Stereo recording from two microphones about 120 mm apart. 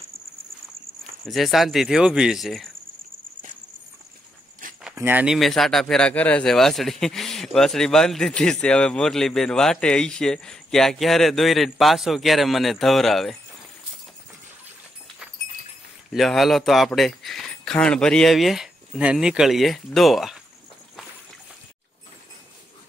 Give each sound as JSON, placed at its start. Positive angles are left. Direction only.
{"t": 1.2, "sound": "a man's voice", "side_deg": 0}
{"t": 4.9, "sound": "speech", "side_deg": -15}
{"t": 5.3, "sound": "a man's voice", "side_deg": 0}
{"t": 16.1, "sound": "a man's voice", "side_deg": 0}